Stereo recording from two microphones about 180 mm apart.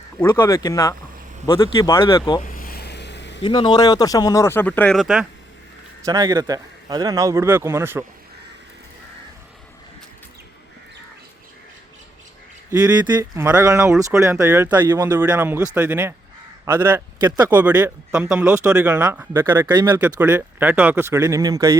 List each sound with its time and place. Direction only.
0.2 s speech: 15° left (ahead or behind)
2.4 s a sound: 50° left (ahead or behind); by 3.4 s 75° left (ahead or behind)
3.4 s speech: 25° left (ahead or behind); by 5.2 s centre (ahead or behind)
6.1 s speech: 20° right (ahead or behind)
12.7 s speech: 20° right (ahead or behind)
15.1 s speech: 10° right (ahead or behind)
17.2 s speech: 25° right (ahead or behind)
17.5 s speech: 10° right (ahead or behind)
19.6 s speech: 25° right (ahead or behind)
19.9 s speech: 10° right (ahead or behind)